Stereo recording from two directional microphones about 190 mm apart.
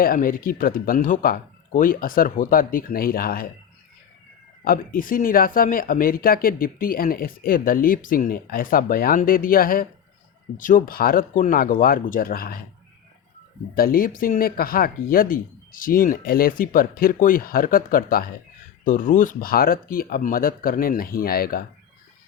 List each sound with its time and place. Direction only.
0.0 s speech: 50° left (ahead or behind)
4.6 s speech: 50° left (ahead or behind)
13.7 s speech: 50° left (ahead or behind)